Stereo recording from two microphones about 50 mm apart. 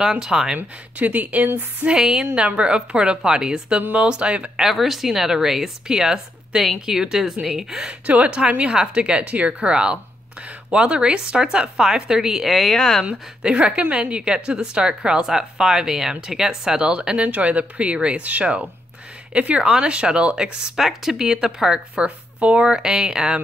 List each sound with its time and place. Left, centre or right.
0.2 s a woman's voice: centre
0.6 s speech: right
1.9 s a woman's voice: centre
4.6 s a woman's voice: centre
8.1 s a woman's voice: right; by 13.0 s centre
13.0 s a woman's voice: right
20.7 s a woman's voice: centre
21.9 s a woman's voice: right